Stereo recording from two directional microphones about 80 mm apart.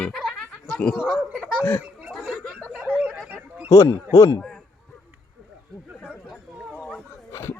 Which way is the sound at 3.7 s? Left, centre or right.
Left.